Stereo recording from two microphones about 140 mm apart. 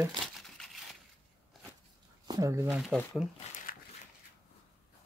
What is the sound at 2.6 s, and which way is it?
Speech, 5° right (ahead or behind).